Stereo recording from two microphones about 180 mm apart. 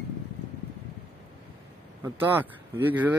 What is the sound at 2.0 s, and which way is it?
Speech, 10° right (ahead or behind).